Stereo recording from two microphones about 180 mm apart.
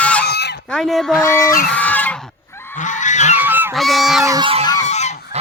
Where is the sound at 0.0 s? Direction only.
5° left (ahead or behind).